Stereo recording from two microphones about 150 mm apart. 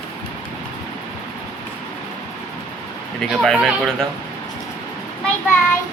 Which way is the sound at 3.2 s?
Centre (ahead or behind).